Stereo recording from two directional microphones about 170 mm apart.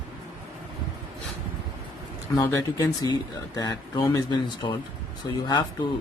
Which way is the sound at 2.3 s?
20° left (ahead or behind).